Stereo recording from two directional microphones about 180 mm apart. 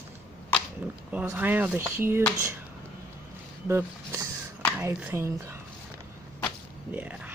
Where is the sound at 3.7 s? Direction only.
15° right (ahead or behind).